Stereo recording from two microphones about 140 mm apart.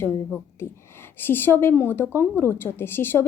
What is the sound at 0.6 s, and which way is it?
A woman's voice, 15° left (ahead or behind).